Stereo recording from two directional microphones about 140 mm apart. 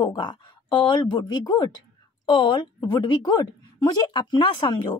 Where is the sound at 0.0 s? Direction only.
30° left (ahead or behind).